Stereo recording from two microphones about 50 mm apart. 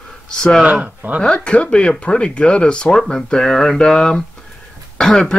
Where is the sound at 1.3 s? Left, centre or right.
Left.